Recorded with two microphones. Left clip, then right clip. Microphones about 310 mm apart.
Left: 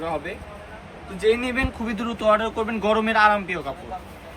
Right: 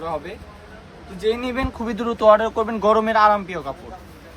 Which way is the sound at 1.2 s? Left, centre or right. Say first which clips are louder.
Left 1 dB; centre.